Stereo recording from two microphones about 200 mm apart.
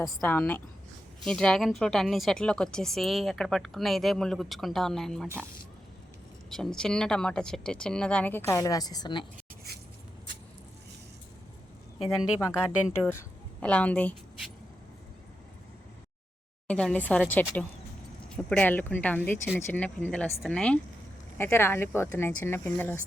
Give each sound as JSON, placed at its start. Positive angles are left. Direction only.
{"t": 0.0, "sound": "a woman's voice", "side_deg": 10}
{"t": 6.5, "sound": "speech", "side_deg": 5}
{"t": 9.7, "sound": "a sound", "side_deg": -50}
{"t": 12.0, "sound": "a woman's voice", "side_deg": 15}
{"t": 16.6, "sound": "a woman's voice", "side_deg": 5}